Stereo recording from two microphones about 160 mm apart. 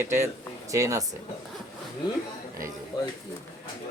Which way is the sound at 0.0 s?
15° right (ahead or behind).